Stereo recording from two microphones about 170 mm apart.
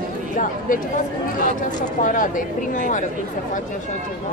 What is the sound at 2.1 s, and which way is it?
Speech, 50° left (ahead or behind).